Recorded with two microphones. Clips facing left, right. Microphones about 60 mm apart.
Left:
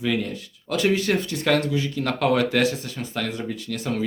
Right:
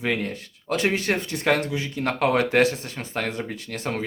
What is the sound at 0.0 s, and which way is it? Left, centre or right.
Speech, right.